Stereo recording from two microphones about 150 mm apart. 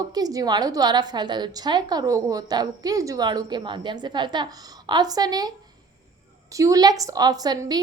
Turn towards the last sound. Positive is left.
turn(degrees=-25)  # may be behind; listen again after turning